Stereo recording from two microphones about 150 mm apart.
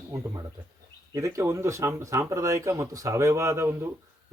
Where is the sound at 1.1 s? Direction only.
20° right (ahead or behind).